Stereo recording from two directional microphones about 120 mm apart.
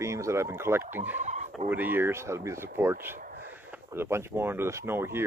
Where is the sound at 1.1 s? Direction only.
75° right (ahead or behind).